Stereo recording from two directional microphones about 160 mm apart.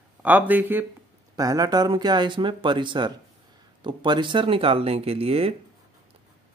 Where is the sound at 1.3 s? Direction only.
20° right (ahead or behind); by 5.5 s 35° right (ahead or behind).